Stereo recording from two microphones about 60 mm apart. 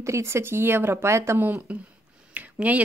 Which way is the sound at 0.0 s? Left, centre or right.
Right.